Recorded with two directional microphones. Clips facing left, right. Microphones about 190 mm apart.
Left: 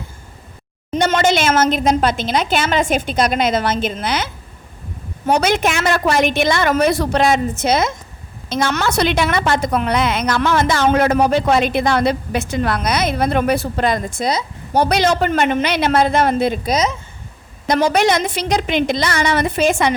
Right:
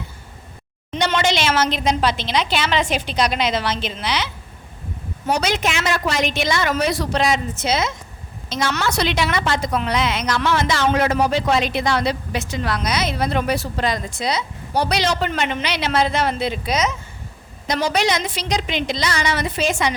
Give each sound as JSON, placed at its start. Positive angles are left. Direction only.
{"t": 0.9, "sound": "a woman's voice", "side_deg": 45}
{"t": 17.7, "sound": "a woman's voice", "side_deg": 55}